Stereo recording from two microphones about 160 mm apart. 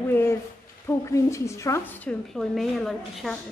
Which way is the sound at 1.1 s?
20° left (ahead or behind).